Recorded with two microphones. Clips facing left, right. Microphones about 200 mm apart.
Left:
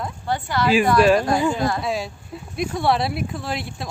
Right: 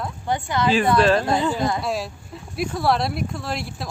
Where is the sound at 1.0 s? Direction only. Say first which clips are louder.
Left 4 dB; 10° left (ahead or behind).